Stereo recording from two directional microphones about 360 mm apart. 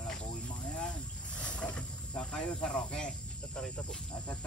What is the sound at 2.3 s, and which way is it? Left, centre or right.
Speech, centre.